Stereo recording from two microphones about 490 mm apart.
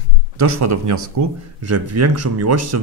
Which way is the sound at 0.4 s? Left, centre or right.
Right.